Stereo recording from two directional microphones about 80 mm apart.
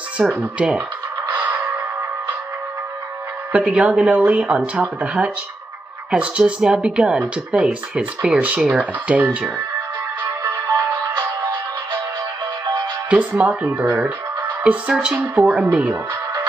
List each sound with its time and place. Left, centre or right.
0.2 s speech: centre
1.4 s music: right
3.5 s speech: centre
10.4 s music: right
13.1 s speech: centre